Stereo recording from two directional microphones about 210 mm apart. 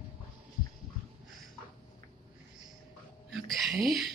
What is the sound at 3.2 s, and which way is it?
Speech, centre (ahead or behind).